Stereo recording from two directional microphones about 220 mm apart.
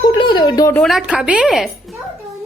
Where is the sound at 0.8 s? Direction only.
Centre (ahead or behind).